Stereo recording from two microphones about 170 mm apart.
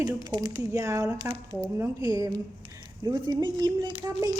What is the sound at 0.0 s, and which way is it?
A woman's voice, 20° right (ahead or behind).